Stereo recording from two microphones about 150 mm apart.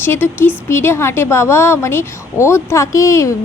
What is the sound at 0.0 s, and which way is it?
Speech, 15° left (ahead or behind).